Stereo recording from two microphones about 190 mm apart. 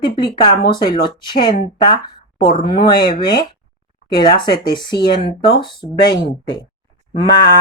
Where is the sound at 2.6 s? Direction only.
25° left (ahead or behind).